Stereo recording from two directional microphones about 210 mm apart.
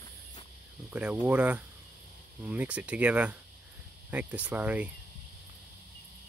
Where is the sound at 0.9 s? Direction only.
5° right (ahead or behind).